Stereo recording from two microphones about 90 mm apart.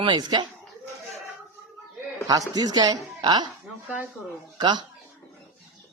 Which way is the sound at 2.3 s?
45° right (ahead or behind).